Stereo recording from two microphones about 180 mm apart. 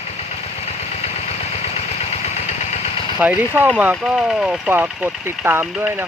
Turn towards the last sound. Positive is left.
turn(degrees=-10)  # may be behind; listen again after turning